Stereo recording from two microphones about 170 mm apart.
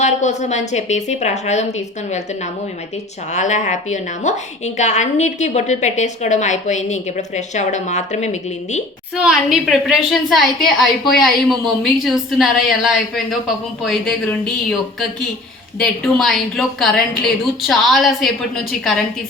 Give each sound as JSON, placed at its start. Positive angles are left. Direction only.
{"t": 0.0, "sound": "a woman's voice", "side_deg": 45}
{"t": 9.1, "sound": "a woman's voice", "side_deg": -5}